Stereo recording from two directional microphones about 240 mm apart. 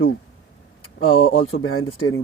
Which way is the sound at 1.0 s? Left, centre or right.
Left.